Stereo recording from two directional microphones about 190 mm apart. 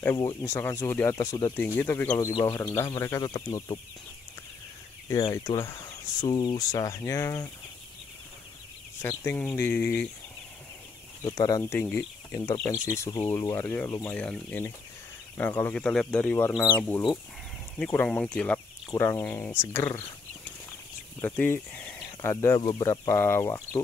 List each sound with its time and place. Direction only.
0.0 s speech: 15° left (ahead or behind)
5.2 s speech: 20° left (ahead or behind)
9.0 s speech: 10° left (ahead or behind)
11.2 s speech: 20° left (ahead or behind)
21.2 s speech: 10° left (ahead or behind)